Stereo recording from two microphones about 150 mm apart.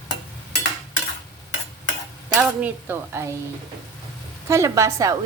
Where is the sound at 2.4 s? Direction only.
10° right (ahead or behind).